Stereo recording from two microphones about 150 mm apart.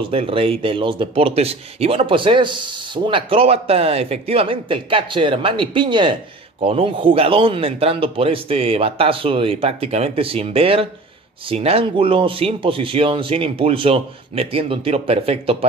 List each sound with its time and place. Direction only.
0.1 s a man's voice: 40° right (ahead or behind)